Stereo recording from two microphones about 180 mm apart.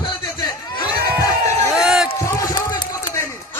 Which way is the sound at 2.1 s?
15° left (ahead or behind).